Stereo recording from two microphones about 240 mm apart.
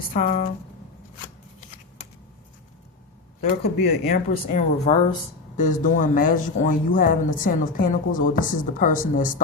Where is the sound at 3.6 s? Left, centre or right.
Left.